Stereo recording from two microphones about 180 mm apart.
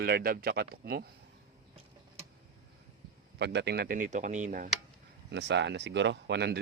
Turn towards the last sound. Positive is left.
turn(degrees=-65)  # may be behind; listen again after turning